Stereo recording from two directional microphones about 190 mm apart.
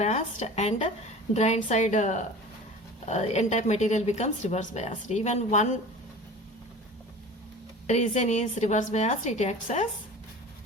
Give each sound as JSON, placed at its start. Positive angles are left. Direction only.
{"t": 0.0, "sound": "speech", "side_deg": 35}
{"t": 7.9, "sound": "speech", "side_deg": 35}